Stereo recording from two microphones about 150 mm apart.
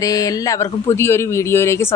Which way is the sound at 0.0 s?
20° left (ahead or behind).